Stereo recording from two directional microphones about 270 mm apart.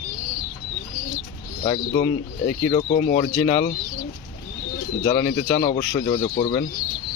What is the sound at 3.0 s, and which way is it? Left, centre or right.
Speech, left.